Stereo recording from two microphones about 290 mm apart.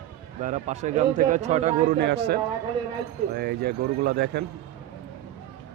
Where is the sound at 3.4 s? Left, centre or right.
Right.